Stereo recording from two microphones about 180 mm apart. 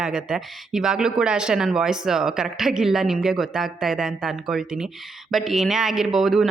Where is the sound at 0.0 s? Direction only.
5° right (ahead or behind).